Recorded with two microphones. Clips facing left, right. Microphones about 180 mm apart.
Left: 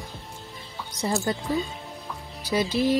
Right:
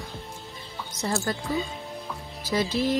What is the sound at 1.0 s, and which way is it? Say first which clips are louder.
Speech: left 2 dB; 15° left (ahead or behind).